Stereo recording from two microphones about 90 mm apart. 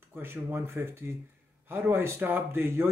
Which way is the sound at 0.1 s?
25° right (ahead or behind).